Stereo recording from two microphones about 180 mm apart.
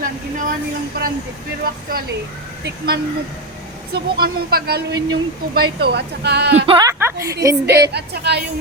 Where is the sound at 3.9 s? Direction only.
55° right (ahead or behind).